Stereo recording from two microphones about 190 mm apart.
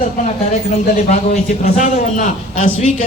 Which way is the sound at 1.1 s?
40° left (ahead or behind).